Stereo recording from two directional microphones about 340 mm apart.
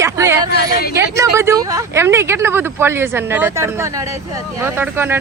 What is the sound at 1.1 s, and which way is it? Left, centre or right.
Speech, centre.